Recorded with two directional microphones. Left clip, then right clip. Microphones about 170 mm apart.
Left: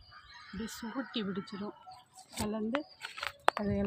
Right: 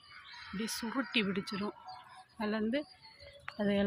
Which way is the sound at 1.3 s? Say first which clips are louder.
Right 3 dB; 10° right (ahead or behind).